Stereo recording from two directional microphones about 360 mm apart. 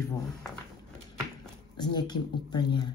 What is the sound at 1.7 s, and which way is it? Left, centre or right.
Speech, centre.